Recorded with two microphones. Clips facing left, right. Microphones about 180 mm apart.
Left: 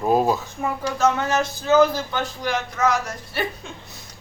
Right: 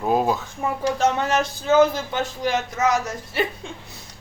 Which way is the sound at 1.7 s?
20° right (ahead or behind).